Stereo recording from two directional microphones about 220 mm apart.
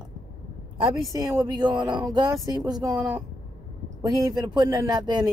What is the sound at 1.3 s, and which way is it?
Speech, 20° right (ahead or behind).